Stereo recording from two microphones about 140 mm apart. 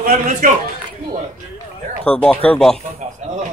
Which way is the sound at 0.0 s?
75° right (ahead or behind).